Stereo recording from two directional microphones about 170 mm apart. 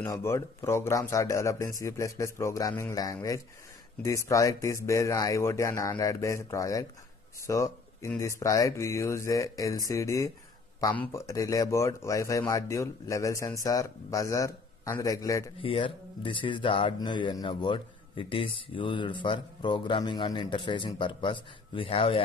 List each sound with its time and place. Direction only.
0.0 s speech: 15° left (ahead or behind)
15.6 s speech: 35° left (ahead or behind)